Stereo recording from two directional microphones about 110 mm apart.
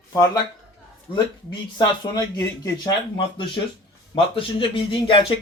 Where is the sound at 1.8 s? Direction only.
30° left (ahead or behind).